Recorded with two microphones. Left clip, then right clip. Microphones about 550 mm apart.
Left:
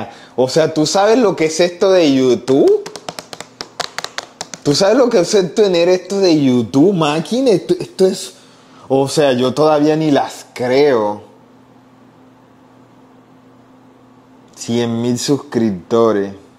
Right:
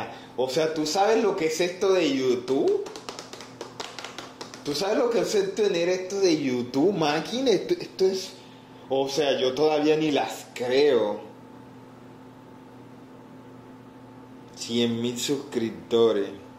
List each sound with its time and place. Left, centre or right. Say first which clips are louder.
0.4 s speech: left 11 dB; left
4.7 s speech: left 12 dB; left
14.7 s speech: left 9 dB; left